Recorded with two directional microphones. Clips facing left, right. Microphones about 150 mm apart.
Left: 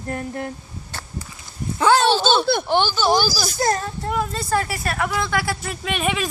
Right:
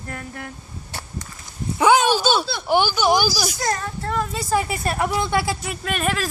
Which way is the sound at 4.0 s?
10° left (ahead or behind).